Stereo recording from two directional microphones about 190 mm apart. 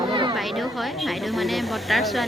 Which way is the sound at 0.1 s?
25° right (ahead or behind).